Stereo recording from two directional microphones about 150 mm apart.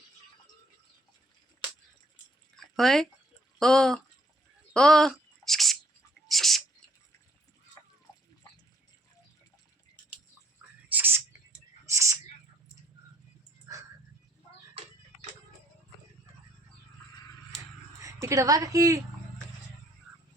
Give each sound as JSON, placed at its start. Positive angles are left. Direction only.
{"t": 2.6, "sound": "drip", "side_deg": 0}
{"t": 3.6, "sound": "speech", "side_deg": 5}
{"t": 4.7, "sound": "a sound", "side_deg": 5}
{"t": 10.9, "sound": "a sound", "side_deg": -15}
{"t": 13.7, "sound": "dog", "side_deg": -20}
{"t": 18.0, "sound": "a woman's voice", "side_deg": -20}